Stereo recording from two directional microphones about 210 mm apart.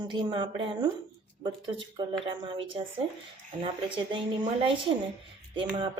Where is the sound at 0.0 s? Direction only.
20° right (ahead or behind).